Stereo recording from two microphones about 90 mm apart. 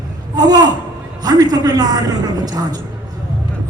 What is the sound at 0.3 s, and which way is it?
A woman's voice, 45° right (ahead or behind).